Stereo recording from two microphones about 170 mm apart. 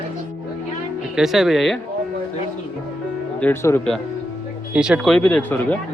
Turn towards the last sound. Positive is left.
turn(degrees=10)  # may be behind; listen again after turning